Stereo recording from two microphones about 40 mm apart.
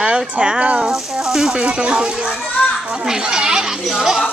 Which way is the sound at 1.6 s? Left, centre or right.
Right.